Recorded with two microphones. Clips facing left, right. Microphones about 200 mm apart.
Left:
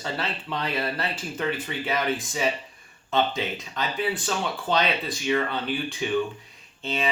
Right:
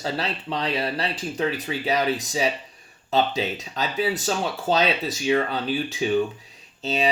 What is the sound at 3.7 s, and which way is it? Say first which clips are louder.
Speech: right 3 dB; 40° right (ahead or behind).